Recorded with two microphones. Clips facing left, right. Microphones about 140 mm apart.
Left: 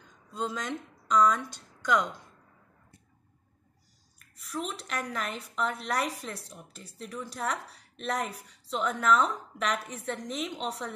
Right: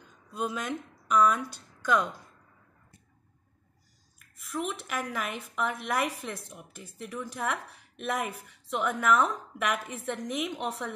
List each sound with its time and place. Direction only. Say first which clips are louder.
0.3 s speech: right 1 dB; 10° right (ahead or behind)
4.5 s a woman's voice: right 2 dB; 5° right (ahead or behind)